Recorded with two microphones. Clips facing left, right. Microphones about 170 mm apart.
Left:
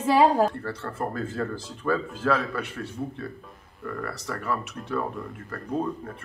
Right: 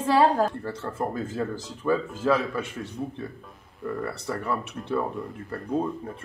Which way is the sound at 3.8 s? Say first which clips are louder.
Right 3 dB; 25° right (ahead or behind).